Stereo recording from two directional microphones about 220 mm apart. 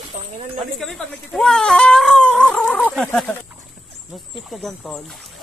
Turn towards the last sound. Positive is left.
turn(degrees=0)  # may be behind; listen again after turning